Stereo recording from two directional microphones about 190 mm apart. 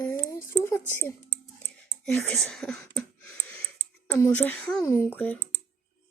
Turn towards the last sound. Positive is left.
turn(degrees=10)  # may be behind; listen again after turning